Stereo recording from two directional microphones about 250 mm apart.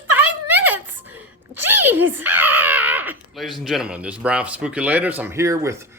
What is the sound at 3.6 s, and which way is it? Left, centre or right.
A man's voice, centre.